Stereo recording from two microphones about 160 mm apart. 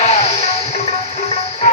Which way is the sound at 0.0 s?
40° left (ahead or behind).